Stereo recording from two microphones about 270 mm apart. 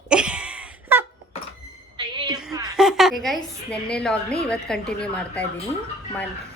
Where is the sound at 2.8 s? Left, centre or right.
Centre.